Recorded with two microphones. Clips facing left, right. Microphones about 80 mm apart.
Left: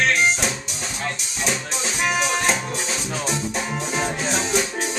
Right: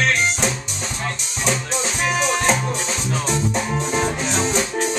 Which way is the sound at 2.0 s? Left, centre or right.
Centre.